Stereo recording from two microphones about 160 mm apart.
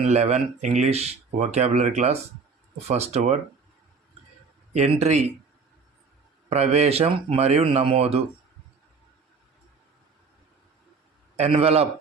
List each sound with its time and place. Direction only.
0.0 s speech: 45° right (ahead or behind)
4.7 s speech: 45° right (ahead or behind)
6.5 s speech: 45° right (ahead or behind)
11.3 s speech: 40° right (ahead or behind)